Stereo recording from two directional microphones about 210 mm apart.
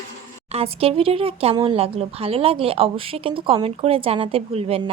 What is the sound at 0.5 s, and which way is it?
Speech, 25° right (ahead or behind).